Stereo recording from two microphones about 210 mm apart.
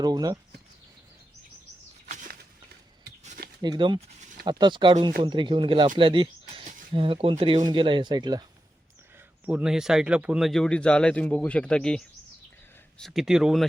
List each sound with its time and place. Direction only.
0.0 s speech: 20° right (ahead or behind)
3.2 s a sound: 45° right (ahead or behind)
3.6 s speech: 20° right (ahead or behind)
6.0 s a sound: 25° right (ahead or behind)
6.9 s speech: 25° right (ahead or behind)
9.5 s speech: 5° right (ahead or behind)